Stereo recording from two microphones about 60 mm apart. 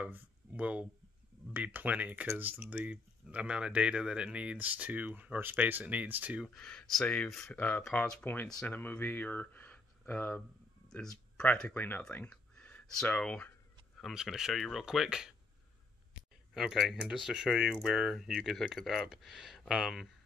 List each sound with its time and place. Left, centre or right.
0.0 s speech: right
6.5 s speech: centre
7.5 s speech: left
10.9 s a sound: centre
11.7 s speech: left
12.1 s a sound: left
13.1 s speech: centre
14.1 s speech: centre
16.5 s speech: centre